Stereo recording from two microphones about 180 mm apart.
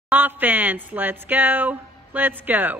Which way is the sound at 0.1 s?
10° right (ahead or behind).